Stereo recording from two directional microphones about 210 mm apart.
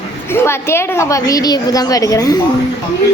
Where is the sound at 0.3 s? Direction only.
10° left (ahead or behind).